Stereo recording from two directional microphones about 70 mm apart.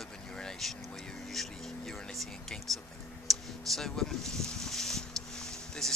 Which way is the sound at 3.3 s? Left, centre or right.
Centre.